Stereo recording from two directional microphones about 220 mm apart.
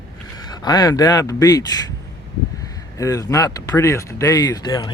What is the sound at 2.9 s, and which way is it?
Speech, 15° left (ahead or behind).